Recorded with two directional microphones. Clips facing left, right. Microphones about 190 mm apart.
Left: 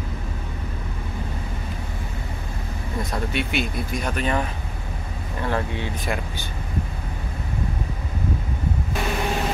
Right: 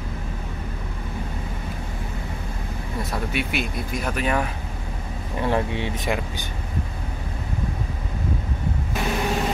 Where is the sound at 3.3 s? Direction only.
5° right (ahead or behind).